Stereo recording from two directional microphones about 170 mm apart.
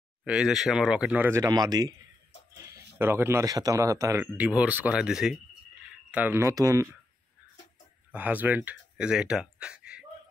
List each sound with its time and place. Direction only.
0.2 s speech: 5° right (ahead or behind); by 6.9 s 20° right (ahead or behind)
8.1 s speech: 10° right (ahead or behind)